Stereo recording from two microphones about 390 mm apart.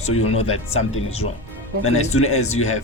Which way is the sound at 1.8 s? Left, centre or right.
Left.